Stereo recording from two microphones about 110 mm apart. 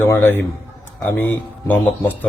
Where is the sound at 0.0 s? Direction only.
20° left (ahead or behind).